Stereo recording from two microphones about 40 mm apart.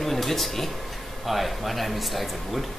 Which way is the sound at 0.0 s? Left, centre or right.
Centre.